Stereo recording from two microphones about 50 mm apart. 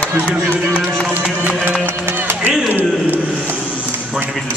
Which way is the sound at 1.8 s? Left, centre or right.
Right.